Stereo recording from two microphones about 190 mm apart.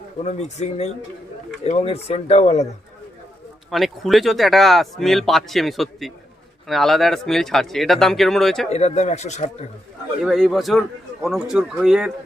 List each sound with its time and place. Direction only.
0.2 s speech: 35° left (ahead or behind)
3.7 s speech: centre (ahead or behind)
8.7 s speech: 35° left (ahead or behind)
10.2 s speech: centre (ahead or behind)